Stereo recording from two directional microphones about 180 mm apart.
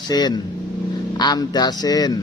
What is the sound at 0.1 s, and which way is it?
Speech, 25° left (ahead or behind).